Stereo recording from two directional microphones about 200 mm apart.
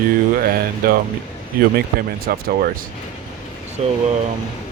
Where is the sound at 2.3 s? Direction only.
45° right (ahead or behind).